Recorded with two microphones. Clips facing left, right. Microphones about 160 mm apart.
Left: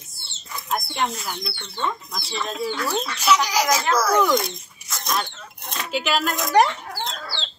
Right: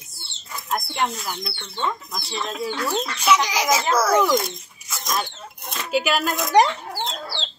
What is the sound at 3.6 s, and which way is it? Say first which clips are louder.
Speech: right 1 dB; 25° right (ahead or behind).